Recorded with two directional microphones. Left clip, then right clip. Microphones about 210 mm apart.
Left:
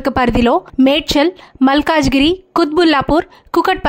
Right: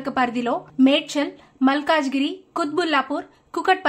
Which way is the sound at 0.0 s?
50° left (ahead or behind).